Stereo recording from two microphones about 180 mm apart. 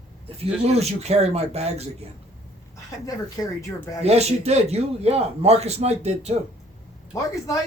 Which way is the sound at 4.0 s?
35° right (ahead or behind).